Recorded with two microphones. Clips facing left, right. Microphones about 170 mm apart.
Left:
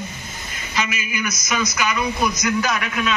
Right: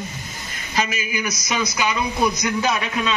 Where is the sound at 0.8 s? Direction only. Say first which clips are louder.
Right 1 dB; 35° right (ahead or behind).